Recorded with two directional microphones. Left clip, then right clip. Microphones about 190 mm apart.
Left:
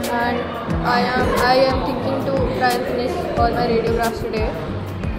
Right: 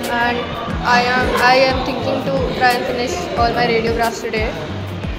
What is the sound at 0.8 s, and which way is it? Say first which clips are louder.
A woman's voice: right 4 dB; 10° left (ahead or behind).